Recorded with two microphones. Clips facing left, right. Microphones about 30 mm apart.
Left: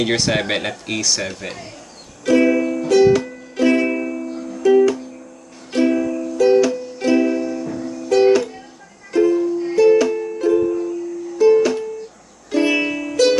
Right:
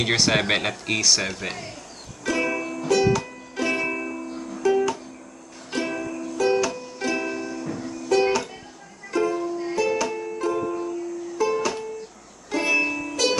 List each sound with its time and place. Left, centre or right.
0.0 s speech: centre
2.2 s music: centre
9.8 s music: centre
10.0 s music: centre
11.3 s music: centre